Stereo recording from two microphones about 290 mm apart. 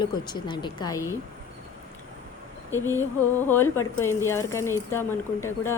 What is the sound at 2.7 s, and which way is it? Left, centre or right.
Speech, centre.